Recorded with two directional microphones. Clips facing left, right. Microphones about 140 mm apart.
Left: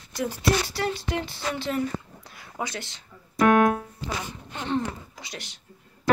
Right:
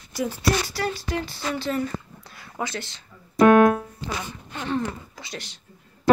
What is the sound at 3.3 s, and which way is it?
Keyboard, 35° right (ahead or behind).